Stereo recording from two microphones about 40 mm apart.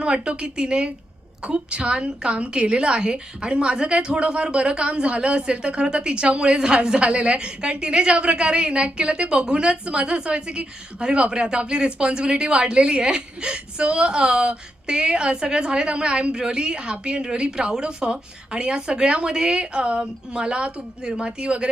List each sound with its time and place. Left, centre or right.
0.0 s a woman's voice: right